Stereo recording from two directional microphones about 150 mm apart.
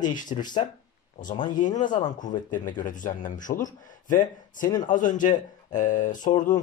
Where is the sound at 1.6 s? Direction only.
55° left (ahead or behind).